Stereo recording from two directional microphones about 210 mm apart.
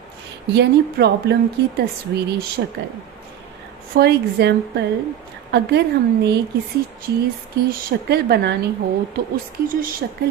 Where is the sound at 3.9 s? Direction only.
50° right (ahead or behind).